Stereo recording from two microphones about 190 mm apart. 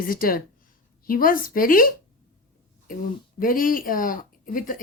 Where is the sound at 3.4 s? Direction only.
45° left (ahead or behind).